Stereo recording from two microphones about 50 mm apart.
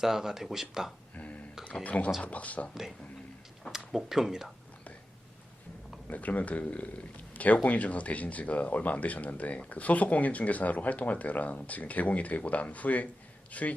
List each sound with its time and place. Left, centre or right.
0.0 s speech: centre
1.1 s a sound: left
1.8 s speech: left
3.7 s speech: centre
6.1 s speech: left